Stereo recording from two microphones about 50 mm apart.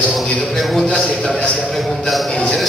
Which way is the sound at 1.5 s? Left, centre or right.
Centre.